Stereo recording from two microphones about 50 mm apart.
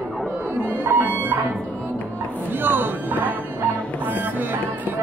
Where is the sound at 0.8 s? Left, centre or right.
Right.